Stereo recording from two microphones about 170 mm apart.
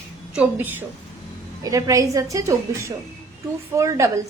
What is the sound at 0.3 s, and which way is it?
A woman's voice, 10° right (ahead or behind).